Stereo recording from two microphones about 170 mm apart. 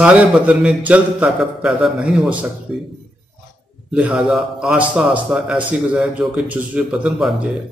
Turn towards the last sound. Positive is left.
turn(degrees=0)  # may be behind; listen again after turning